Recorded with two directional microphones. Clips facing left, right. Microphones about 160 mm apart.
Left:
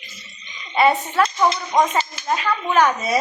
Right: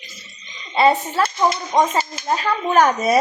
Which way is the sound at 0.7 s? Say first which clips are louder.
Right 1 dB; 30° right (ahead or behind).